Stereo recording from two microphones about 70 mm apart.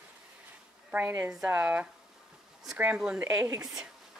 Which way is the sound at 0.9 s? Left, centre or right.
Right.